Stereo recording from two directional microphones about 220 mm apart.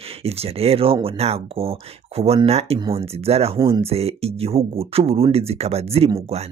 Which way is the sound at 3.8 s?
25° right (ahead or behind).